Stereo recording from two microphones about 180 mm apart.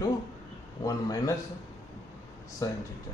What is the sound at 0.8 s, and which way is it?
Speech, 20° left (ahead or behind).